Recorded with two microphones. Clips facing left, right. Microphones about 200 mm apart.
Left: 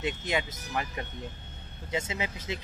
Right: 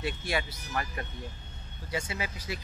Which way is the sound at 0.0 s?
20° left (ahead or behind).